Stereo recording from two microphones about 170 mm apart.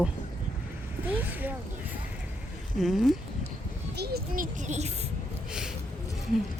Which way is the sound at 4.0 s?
65° right (ahead or behind).